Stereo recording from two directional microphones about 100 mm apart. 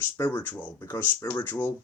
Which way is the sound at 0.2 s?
20° left (ahead or behind).